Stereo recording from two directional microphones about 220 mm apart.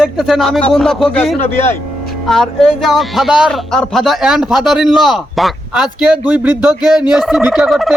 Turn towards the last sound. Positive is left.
turn(degrees=0)  # may be behind; listen again after turning